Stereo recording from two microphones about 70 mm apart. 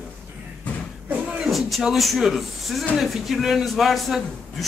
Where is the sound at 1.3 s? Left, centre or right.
Centre.